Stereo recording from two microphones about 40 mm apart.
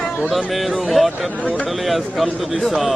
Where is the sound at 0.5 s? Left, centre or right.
Centre.